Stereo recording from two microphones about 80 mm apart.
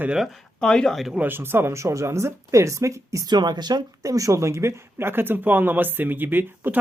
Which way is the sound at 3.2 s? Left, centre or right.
Right.